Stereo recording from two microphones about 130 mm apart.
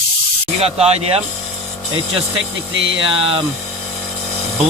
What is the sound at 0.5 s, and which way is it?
Speech, 50° right (ahead or behind).